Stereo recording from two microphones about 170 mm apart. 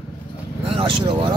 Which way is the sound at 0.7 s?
30° right (ahead or behind).